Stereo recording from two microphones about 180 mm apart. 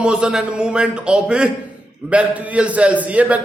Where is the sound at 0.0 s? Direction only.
5° right (ahead or behind).